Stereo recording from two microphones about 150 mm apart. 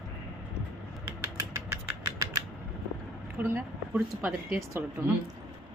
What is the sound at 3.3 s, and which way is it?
A woman's voice, 15° right (ahead or behind).